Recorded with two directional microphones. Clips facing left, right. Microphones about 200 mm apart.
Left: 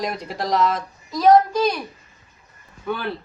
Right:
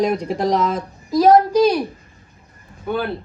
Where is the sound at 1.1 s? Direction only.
30° right (ahead or behind).